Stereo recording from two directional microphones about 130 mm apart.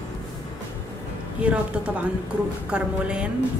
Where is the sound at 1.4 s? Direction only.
10° right (ahead or behind).